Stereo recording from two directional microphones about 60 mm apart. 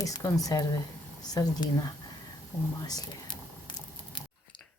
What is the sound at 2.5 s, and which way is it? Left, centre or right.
Speech, left.